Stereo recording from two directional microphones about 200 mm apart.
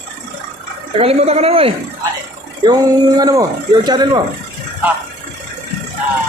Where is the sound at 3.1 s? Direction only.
20° right (ahead or behind).